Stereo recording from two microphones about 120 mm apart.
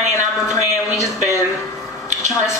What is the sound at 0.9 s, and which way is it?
Speech, 25° left (ahead or behind).